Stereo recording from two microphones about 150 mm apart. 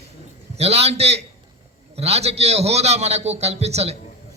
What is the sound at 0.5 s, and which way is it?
A man's voice, 45° right (ahead or behind).